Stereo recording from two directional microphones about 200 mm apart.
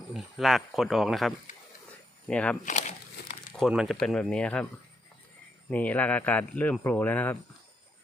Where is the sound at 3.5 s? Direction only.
Centre (ahead or behind).